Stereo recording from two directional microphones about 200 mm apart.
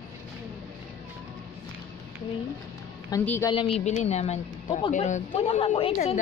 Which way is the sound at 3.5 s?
25° left (ahead or behind).